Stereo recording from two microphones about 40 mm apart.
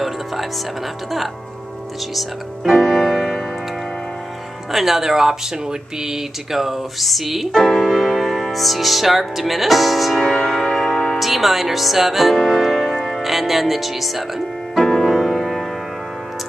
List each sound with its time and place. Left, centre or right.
2.1 s music: centre
2.9 s music: centre
4.6 s speech: centre
7.6 s music: centre
10.2 s music: centre
11.1 s music: centre
13.2 s music: centre